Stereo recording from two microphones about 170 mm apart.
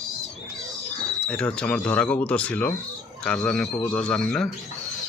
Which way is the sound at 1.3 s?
5° left (ahead or behind).